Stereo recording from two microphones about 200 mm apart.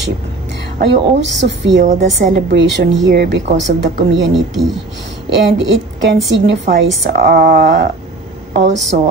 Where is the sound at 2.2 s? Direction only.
60° right (ahead or behind).